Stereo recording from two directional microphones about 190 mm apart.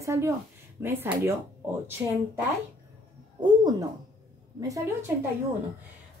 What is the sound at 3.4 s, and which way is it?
Speech, 20° right (ahead or behind).